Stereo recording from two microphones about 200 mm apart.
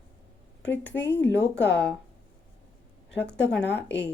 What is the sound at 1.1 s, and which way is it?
Speech, 60° left (ahead or behind).